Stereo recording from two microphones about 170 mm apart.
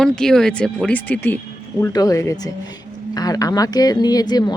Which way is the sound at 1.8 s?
20° left (ahead or behind).